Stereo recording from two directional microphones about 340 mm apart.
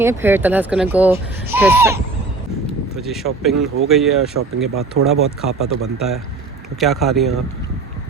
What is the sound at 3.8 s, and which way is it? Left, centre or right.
Speech, centre.